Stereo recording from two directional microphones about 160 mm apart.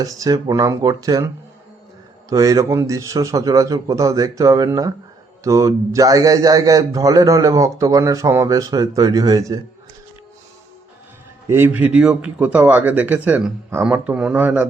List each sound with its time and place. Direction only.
0.0 s a man's voice: 20° right (ahead or behind)
2.3 s a man's voice: 20° right (ahead or behind)
11.4 s a man's voice: 15° right (ahead or behind)